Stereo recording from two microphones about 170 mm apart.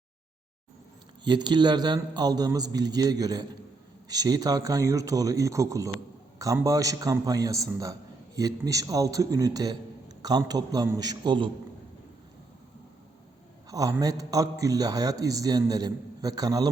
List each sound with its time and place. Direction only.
1.2 s a man's voice: 25° right (ahead or behind)
13.7 s a man's voice: 20° right (ahead or behind)